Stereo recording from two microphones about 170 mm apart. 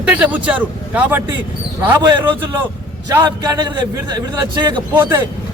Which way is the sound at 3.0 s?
25° right (ahead or behind).